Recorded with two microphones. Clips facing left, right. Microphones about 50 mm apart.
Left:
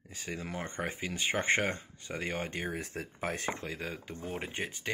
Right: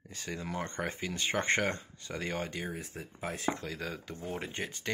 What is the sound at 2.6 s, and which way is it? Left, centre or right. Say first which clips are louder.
Speech: left 3 dB; left.